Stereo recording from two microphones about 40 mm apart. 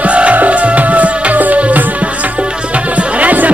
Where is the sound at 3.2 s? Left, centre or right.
Right.